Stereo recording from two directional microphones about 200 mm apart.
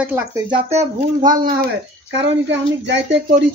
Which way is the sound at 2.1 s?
60° right (ahead or behind).